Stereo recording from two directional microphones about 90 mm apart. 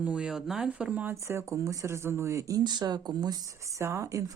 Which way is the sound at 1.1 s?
30° right (ahead or behind).